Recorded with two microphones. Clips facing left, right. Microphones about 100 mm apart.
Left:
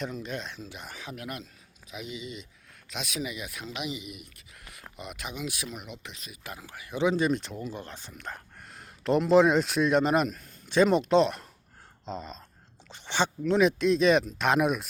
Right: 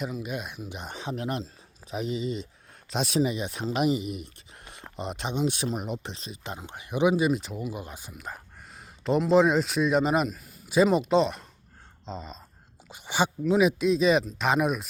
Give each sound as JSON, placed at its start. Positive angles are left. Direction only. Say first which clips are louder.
{"t": 0.0, "sound": "speech", "louder": "right 2 dB", "side_deg": -10}
{"t": 12.9, "sound": "speech", "louder": "right 2 dB", "side_deg": -10}